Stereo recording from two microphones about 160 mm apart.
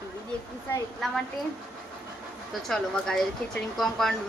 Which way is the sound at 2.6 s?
Centre (ahead or behind).